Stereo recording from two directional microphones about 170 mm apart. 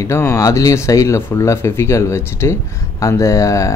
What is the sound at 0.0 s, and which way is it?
Speech, 15° left (ahead or behind).